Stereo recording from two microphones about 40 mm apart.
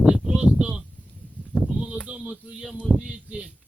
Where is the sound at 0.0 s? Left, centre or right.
Right.